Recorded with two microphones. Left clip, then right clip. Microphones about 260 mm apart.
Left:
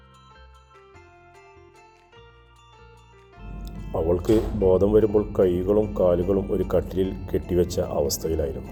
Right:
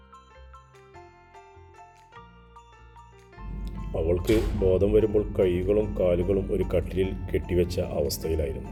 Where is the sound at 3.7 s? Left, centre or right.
Centre.